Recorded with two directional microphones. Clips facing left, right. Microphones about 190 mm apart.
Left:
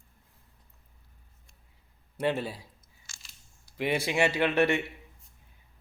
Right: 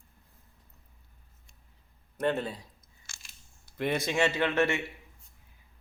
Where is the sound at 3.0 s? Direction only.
60° right (ahead or behind).